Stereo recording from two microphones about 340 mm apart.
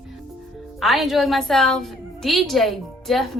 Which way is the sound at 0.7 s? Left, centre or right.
Centre.